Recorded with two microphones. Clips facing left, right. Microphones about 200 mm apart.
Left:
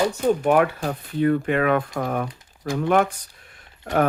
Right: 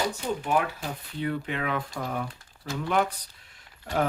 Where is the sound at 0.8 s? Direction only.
50° left (ahead or behind).